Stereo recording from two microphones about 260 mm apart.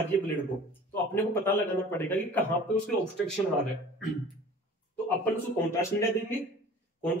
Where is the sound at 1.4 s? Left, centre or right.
Centre.